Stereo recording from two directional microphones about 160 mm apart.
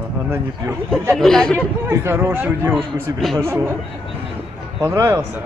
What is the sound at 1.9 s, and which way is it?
Speech, 15° right (ahead or behind).